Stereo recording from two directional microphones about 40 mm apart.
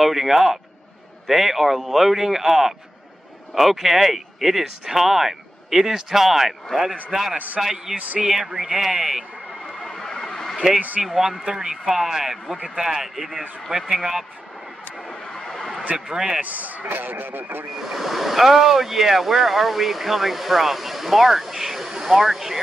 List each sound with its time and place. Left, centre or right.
0.0 s speech: centre
7.3 s a man's voice: right
7.6 s speech: centre
9.8 s vehicle: centre
11.0 s speech: centre
11.7 s speech: centre
15.0 s vehicle: left
16.1 s speech: centre
16.3 s speech: right
17.7 s speech: centre